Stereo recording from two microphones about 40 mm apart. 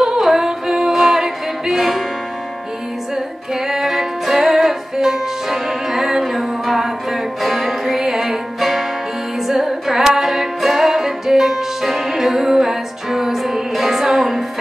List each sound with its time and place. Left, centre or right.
0.0 s a capella: centre
3.6 s music: centre